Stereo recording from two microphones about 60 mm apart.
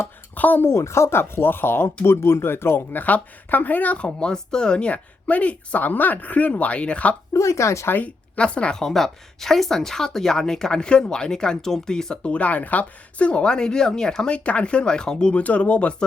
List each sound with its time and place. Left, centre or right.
0.3 s speech: left
0.7 s speech: left
3.0 s speech: left
7.3 s speech: left
7.9 s speech: left
8.4 s speech: centre
8.8 s a woman's voice: centre